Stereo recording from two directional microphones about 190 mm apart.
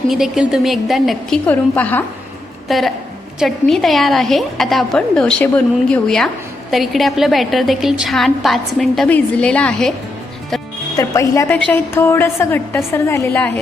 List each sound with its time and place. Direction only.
0.1 s a woman's voice: centre (ahead or behind)
10.9 s a woman's voice: 15° left (ahead or behind)